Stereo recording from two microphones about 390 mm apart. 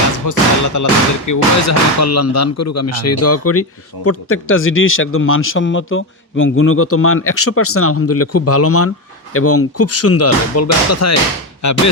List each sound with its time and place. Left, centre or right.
0.3 s speech: left